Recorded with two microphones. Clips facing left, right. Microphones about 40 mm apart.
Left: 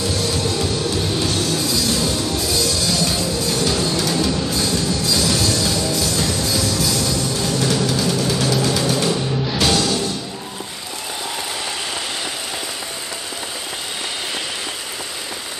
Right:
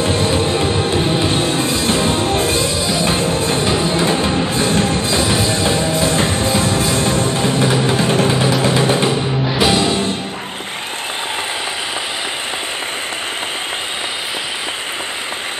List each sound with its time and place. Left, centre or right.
0.0 s music: right